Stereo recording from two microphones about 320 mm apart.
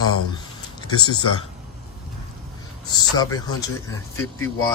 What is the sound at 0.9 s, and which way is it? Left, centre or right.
Speech, left.